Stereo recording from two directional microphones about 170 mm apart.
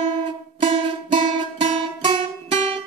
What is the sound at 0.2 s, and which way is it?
Music, 30° right (ahead or behind).